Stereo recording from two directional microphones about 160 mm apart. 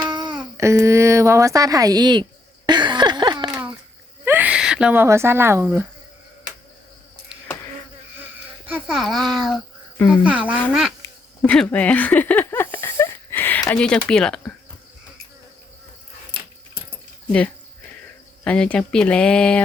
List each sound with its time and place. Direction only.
0.1 s babbling: 25° right (ahead or behind)
2.6 s a sound: 30° right (ahead or behind)
4.3 s speech: 10° right (ahead or behind)
8.6 s a child's voice: 5° right (ahead or behind)
11.4 s a sound: 5° left (ahead or behind)
14.1 s speech: 5° left (ahead or behind)
18.4 s speech: 5° left (ahead or behind)